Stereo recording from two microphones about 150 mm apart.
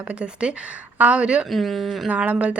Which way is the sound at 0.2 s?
5° right (ahead or behind).